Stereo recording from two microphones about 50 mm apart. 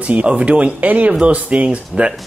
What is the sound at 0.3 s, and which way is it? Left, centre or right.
Speech, right.